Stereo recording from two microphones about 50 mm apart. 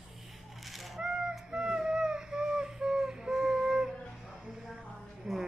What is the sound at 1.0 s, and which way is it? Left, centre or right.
Honk, centre.